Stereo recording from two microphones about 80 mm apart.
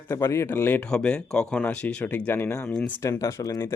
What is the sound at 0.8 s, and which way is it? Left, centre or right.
Speech, centre.